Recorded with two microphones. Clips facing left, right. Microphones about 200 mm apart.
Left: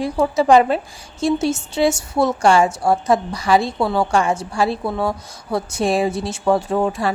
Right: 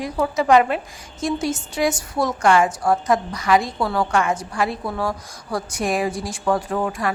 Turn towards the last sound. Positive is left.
turn(degrees=25)  # may be behind; listen again after turning